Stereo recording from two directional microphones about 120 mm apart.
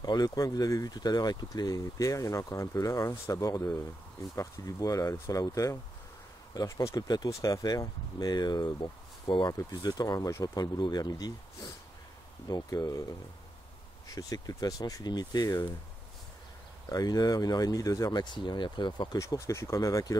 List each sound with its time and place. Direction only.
0.0 s speech: 35° left (ahead or behind)
16.9 s speech: 30° left (ahead or behind)
19.1 s speech: 25° left (ahead or behind)